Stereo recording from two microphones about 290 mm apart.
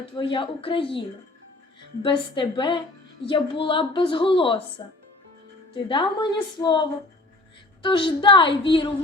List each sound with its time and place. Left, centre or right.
0.2 s a woman's voice: centre
5.7 s a woman's voice: centre